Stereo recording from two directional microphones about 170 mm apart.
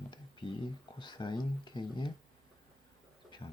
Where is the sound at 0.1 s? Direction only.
30° left (ahead or behind).